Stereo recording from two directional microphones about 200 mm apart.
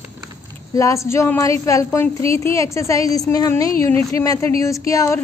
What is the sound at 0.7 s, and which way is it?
A woman's voice, 15° left (ahead or behind).